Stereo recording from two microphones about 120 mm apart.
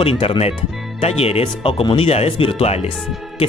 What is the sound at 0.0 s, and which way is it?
Speech, 50° left (ahead or behind).